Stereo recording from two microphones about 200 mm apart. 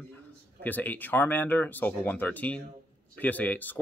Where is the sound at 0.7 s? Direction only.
10° left (ahead or behind).